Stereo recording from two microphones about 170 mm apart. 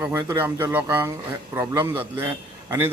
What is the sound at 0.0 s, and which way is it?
A man's voice, 15° right (ahead or behind).